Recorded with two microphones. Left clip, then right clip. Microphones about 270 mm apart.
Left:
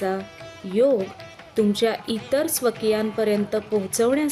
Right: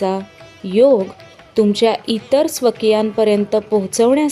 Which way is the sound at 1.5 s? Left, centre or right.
Centre.